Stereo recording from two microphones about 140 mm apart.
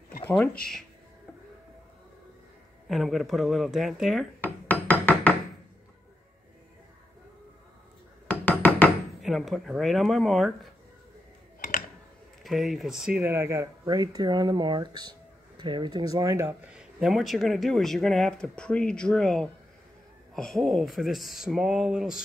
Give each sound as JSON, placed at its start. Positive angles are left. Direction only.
{"t": 2.9, "sound": "speech", "side_deg": 0}
{"t": 4.4, "sound": "a sound", "side_deg": 15}
{"t": 8.3, "sound": "music", "side_deg": 10}
{"t": 9.2, "sound": "speech", "side_deg": 0}
{"t": 12.4, "sound": "speech", "side_deg": 0}
{"t": 13.3, "sound": "speech", "side_deg": -20}
{"t": 16.7, "sound": "speech", "side_deg": 0}